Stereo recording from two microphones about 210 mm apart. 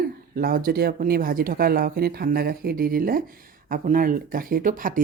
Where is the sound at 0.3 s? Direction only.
45° right (ahead or behind).